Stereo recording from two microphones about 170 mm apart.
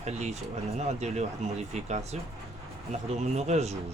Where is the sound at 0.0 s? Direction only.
40° right (ahead or behind).